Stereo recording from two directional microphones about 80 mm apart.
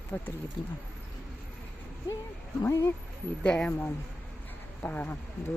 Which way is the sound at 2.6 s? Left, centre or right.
Left.